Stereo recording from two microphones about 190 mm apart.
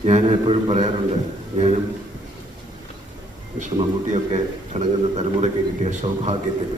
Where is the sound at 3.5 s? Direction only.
35° right (ahead or behind).